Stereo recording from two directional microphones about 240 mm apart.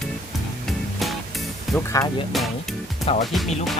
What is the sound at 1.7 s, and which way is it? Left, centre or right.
Speech, centre.